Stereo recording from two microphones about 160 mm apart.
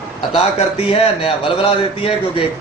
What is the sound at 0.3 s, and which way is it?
A man's voice, 35° left (ahead or behind).